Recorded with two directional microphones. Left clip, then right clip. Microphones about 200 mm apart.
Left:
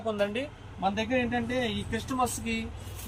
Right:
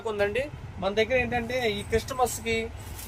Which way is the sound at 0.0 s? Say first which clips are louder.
Right 3 dB; 45° right (ahead or behind).